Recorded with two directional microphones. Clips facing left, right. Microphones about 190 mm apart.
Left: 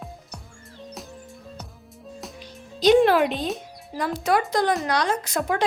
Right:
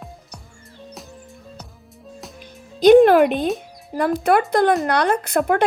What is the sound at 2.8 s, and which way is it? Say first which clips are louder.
Speech: right 6 dB; 55° right (ahead or behind).